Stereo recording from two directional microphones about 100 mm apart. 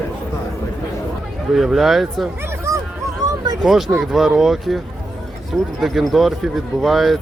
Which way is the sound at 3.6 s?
5° right (ahead or behind).